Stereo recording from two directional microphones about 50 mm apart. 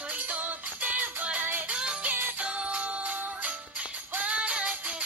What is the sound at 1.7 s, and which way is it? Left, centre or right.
Music, centre.